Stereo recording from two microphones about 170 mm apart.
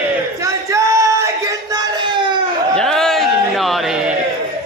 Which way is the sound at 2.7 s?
5° left (ahead or behind).